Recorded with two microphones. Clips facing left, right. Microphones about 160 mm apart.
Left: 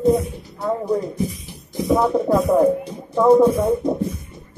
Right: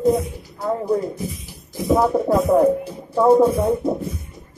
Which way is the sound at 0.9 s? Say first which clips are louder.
Even; 5° right (ahead or behind).